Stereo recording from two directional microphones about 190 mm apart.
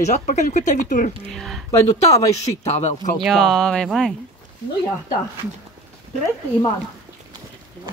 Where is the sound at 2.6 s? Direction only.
40° left (ahead or behind).